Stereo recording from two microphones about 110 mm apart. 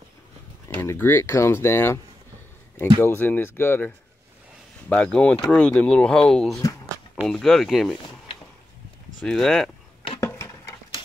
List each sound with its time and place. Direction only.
0.7 s speech: 20° left (ahead or behind)
3.0 s speech: 20° left (ahead or behind)
4.8 s speech: 10° left (ahead or behind)
9.2 s speech: 5° left (ahead or behind)
10.2 s a sound: 30° left (ahead or behind)